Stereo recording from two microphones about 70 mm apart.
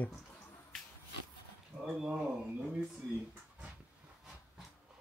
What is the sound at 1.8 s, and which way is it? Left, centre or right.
Speech, centre.